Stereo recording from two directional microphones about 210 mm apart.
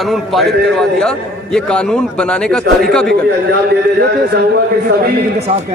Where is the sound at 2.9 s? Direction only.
5° left (ahead or behind).